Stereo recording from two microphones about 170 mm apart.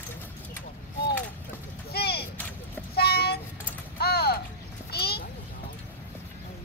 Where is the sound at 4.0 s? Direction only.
70° left (ahead or behind).